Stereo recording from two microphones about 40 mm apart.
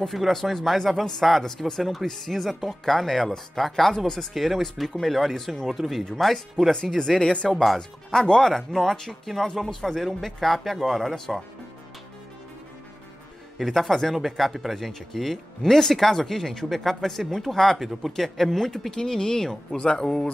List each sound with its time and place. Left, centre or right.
0.1 s speech: centre
4.3 s speech: centre; by 7.4 s left
7.4 s speech: centre
13.6 s speech: centre
18.7 s speech: centre